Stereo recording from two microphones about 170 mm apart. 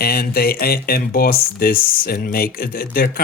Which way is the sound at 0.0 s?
65° left (ahead or behind).